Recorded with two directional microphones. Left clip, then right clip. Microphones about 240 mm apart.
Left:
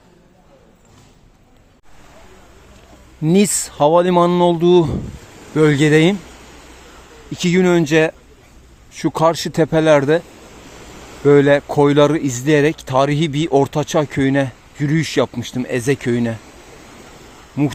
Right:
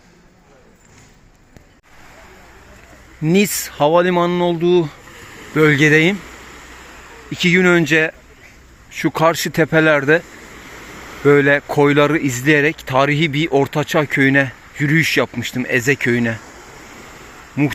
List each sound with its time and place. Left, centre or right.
3.2 s speech: centre
7.3 s speech: centre
11.3 s speech: centre
17.6 s speech: centre